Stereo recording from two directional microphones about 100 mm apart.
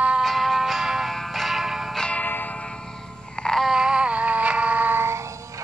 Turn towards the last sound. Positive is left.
turn(degrees=-20)  # may be behind; listen again after turning